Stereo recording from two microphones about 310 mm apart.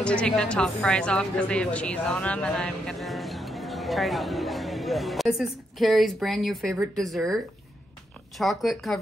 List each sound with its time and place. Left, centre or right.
0.0 s a woman's voice: centre